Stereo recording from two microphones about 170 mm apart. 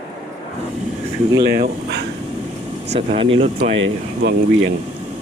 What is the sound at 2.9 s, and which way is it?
Speech, 35° right (ahead or behind).